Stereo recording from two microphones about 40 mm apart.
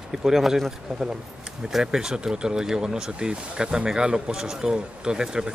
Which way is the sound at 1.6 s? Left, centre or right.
Centre.